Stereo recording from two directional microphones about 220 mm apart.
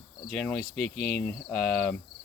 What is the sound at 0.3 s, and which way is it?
Speech, centre (ahead or behind).